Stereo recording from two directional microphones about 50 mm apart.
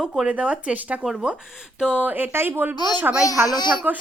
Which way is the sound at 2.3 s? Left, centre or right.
Right.